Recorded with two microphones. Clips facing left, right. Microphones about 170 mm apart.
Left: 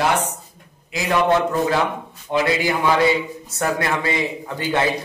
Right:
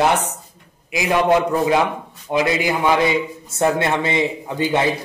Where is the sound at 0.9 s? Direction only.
15° right (ahead or behind).